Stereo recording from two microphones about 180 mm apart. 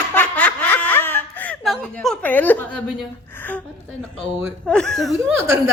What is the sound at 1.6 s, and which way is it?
A woman's voice, centre (ahead or behind).